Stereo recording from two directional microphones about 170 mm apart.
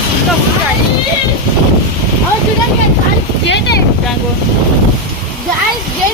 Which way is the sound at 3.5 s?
90° left.